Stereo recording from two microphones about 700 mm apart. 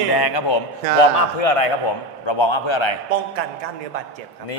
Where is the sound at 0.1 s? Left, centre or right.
Left.